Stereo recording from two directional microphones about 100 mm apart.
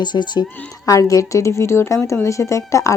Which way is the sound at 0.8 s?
30° left (ahead or behind).